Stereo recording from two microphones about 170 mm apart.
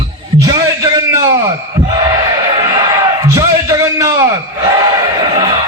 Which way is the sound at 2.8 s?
20° right (ahead or behind).